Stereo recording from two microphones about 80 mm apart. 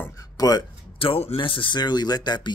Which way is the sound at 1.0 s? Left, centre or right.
Left.